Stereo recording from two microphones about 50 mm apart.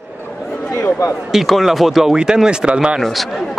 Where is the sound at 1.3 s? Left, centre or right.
Centre; by 3.0 s right.